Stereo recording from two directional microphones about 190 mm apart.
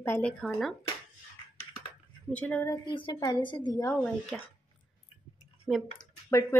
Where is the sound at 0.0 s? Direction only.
10° left (ahead or behind).